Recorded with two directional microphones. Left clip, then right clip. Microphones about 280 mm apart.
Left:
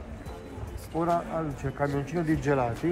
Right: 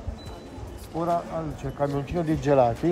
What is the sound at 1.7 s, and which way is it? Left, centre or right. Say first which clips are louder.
Speech: right 3 dB; centre.